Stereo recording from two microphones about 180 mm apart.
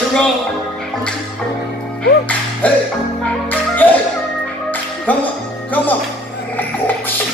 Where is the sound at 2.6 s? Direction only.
10° left (ahead or behind).